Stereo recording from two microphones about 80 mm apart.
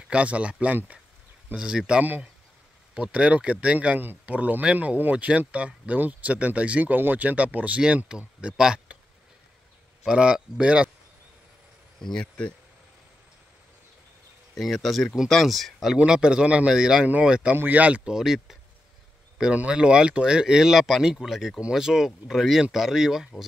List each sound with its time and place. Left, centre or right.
0.1 s speech: centre
10.0 s speech: centre
12.0 s speech: centre
14.5 s speech: centre
18.1 s speech: centre